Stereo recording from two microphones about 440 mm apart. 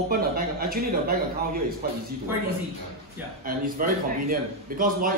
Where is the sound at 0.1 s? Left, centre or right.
Centre.